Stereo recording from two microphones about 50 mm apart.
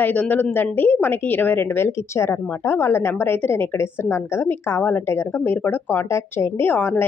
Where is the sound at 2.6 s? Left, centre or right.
Left.